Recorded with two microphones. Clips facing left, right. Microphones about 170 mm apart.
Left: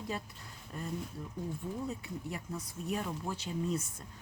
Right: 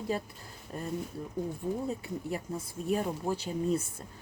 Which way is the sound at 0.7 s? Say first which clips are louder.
Right 4 dB; 40° right (ahead or behind).